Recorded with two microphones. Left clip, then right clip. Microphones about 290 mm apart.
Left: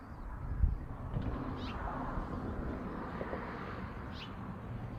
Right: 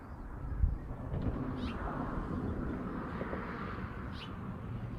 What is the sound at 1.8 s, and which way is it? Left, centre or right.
Vehicle, left.